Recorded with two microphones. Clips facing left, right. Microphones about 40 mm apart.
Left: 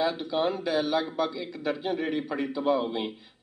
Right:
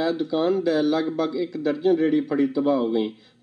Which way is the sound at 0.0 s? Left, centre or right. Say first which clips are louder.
Right 4 dB; left.